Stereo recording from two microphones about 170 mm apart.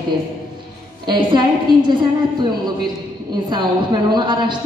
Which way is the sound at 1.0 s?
25° right (ahead or behind).